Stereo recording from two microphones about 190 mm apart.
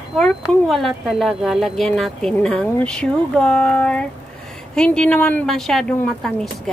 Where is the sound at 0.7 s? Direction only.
Centre (ahead or behind).